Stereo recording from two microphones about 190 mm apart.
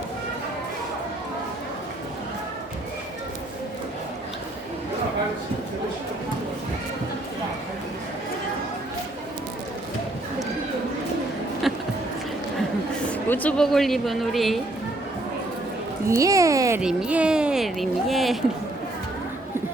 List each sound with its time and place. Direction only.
11.7 s a sound: centre (ahead or behind)
13.2 s speech: 10° left (ahead or behind)
16.0 s speech: 15° right (ahead or behind)
16.8 s speech: 5° right (ahead or behind)